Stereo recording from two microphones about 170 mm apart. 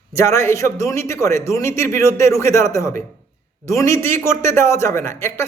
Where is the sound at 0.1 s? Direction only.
15° left (ahead or behind).